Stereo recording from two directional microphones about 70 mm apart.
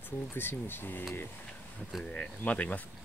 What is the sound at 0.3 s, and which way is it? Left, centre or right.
Speech, left.